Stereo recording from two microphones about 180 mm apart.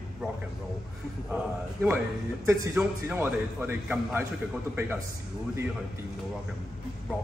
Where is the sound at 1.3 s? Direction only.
10° right (ahead or behind).